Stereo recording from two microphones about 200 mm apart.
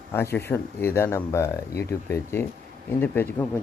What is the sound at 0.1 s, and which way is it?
Speech, 10° left (ahead or behind).